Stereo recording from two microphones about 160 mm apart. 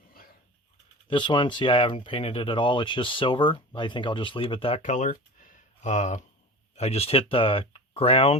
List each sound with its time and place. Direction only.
1.0 s speech: 30° left (ahead or behind)
4.8 s speech: 50° left (ahead or behind)